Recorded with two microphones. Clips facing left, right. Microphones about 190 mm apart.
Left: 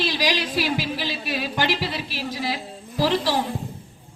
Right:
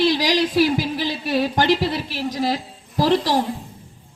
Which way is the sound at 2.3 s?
45° right (ahead or behind).